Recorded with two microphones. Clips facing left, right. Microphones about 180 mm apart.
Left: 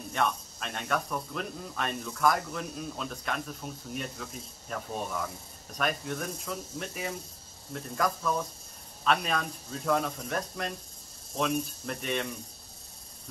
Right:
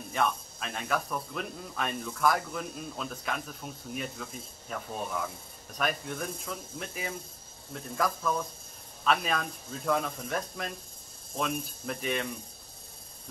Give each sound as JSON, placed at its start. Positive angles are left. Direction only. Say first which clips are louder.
{"t": 0.1, "sound": "speech", "louder": "even", "side_deg": 0}